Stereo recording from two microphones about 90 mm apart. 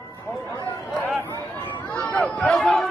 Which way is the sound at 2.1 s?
15° left (ahead or behind).